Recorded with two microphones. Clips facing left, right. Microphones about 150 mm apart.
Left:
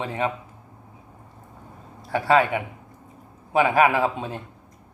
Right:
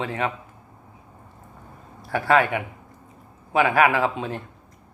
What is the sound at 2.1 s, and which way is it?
A man's voice, 15° left (ahead or behind).